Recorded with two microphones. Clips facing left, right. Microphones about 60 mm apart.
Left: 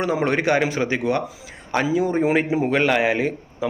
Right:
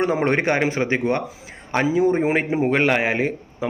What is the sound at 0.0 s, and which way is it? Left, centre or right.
A man's voice, right.